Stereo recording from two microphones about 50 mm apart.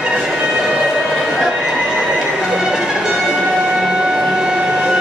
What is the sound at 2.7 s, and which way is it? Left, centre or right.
Music, centre.